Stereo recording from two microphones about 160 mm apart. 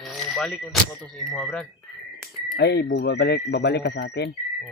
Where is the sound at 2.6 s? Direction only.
90° left.